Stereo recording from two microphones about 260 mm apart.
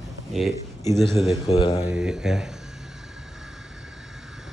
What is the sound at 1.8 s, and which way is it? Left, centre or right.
Speech, centre.